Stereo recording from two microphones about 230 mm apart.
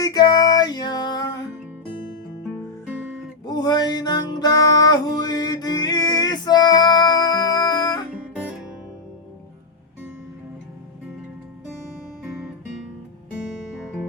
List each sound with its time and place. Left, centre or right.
0.0 s music: centre
2.8 s guitar: centre
3.5 s music: centre
8.3 s guitar: centre